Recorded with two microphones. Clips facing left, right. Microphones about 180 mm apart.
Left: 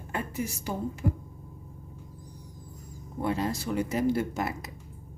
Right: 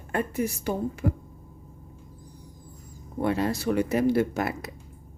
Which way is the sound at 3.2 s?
65° right (ahead or behind).